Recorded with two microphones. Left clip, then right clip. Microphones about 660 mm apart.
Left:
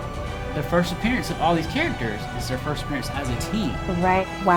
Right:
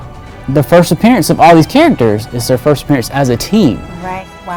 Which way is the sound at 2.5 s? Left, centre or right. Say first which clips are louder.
Right 19 dB; right.